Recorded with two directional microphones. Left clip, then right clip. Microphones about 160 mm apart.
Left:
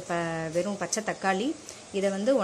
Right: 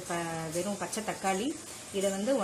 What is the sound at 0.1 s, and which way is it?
Speech, 25° left (ahead or behind).